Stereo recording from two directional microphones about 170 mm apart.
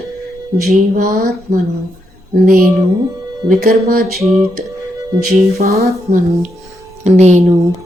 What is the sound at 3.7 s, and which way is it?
Speech, 60° right (ahead or behind).